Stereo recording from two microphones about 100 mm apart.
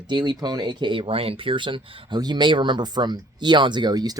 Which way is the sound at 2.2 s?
45° right (ahead or behind).